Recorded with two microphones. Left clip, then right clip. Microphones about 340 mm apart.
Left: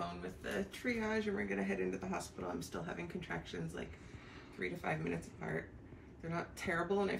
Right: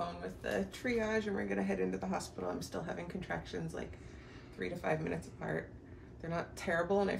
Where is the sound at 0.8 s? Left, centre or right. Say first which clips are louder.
Right 2 dB; centre.